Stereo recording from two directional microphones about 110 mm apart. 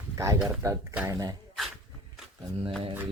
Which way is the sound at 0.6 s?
30° right (ahead or behind).